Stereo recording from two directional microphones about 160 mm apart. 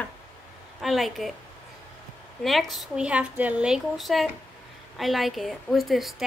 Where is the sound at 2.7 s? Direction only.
5° right (ahead or behind).